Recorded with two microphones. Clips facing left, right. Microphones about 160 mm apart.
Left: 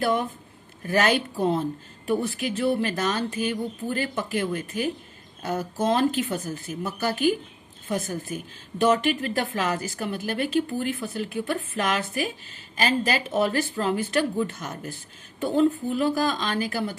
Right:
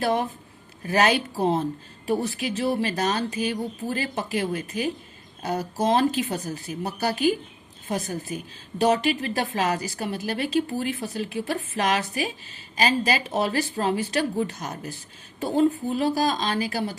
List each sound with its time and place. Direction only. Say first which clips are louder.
0.0 s a woman's voice: even; 55° left (ahead or behind)